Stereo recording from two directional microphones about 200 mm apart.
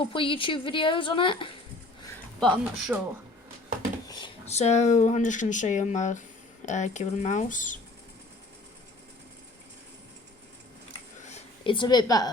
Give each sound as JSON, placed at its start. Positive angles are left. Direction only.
{"t": 0.0, "sound": "a woman's voice", "side_deg": 25}
{"t": 2.4, "sound": "speech", "side_deg": 0}
{"t": 4.0, "sound": "drawer open or close", "side_deg": 20}
{"t": 4.4, "sound": "speech", "side_deg": 35}
{"t": 11.2, "sound": "a sound", "side_deg": 35}